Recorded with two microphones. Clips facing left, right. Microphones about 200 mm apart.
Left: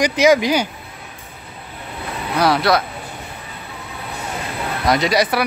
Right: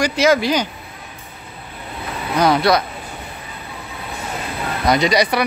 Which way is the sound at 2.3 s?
5° left (ahead or behind).